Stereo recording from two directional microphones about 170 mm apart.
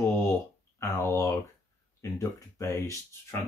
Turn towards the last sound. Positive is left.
turn(degrees=15)  # may be behind; listen again after turning